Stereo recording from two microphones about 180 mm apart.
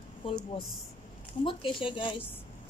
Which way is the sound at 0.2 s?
30° left (ahead or behind).